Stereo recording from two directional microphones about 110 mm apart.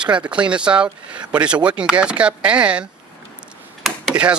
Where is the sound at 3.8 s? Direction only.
5° right (ahead or behind).